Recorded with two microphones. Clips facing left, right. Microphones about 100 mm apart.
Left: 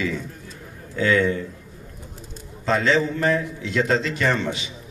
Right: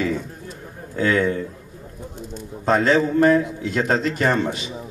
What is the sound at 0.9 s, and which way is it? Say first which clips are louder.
Speech: even; 50° right (ahead or behind).